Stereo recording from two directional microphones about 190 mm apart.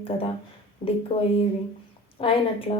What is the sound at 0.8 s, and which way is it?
Speech, 45° left (ahead or behind).